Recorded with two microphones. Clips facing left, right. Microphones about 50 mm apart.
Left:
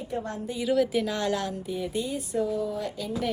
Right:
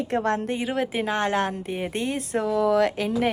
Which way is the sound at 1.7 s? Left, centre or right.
Right.